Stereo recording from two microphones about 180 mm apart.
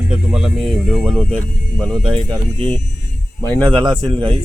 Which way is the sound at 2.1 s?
25° right (ahead or behind).